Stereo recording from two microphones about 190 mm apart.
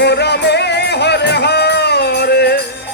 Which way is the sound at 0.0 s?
60° left (ahead or behind).